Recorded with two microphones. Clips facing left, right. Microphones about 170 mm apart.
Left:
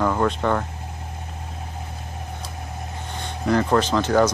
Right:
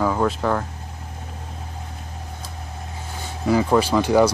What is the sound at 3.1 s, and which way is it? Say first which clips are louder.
Speech: right 1 dB; 5° right (ahead or behind).